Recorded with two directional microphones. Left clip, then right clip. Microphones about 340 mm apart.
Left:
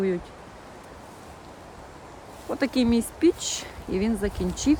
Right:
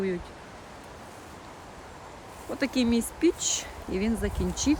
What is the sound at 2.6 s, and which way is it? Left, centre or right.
Speech, centre.